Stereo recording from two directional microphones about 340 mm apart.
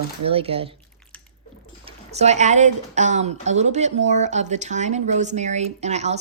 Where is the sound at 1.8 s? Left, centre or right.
Centre.